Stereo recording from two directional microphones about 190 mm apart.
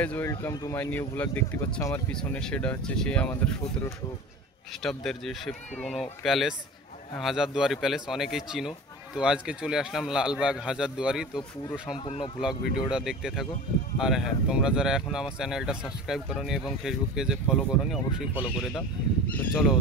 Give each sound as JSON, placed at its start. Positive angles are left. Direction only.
{"t": 0.0, "sound": "speech", "side_deg": 10}
{"t": 11.9, "sound": "speech", "side_deg": 30}
{"t": 12.4, "sound": "speech", "side_deg": -5}
{"t": 18.7, "sound": "speech", "side_deg": 10}